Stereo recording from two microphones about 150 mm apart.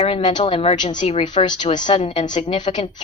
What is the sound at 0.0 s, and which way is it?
A woman's voice, 35° left (ahead or behind).